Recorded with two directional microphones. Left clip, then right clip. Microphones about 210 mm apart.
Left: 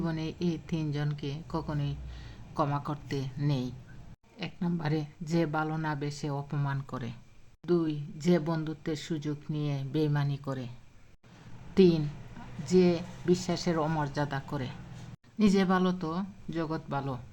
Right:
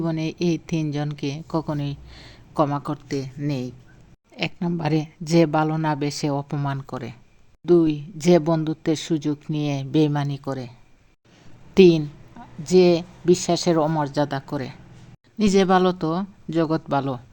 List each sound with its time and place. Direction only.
0.0 s speech: 30° right (ahead or behind)
2.6 s speech: 20° right (ahead or behind)
4.4 s speech: 35° right (ahead or behind)
11.7 s a woman's voice: 30° right (ahead or behind)